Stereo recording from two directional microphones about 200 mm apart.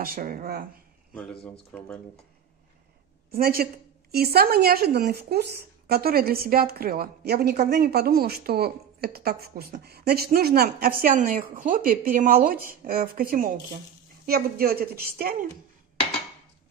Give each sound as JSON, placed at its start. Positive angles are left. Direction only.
{"t": 0.0, "sound": "speech", "side_deg": -45}
{"t": 1.4, "sound": "speech", "side_deg": 5}
{"t": 3.3, "sound": "a woman's voice", "side_deg": -50}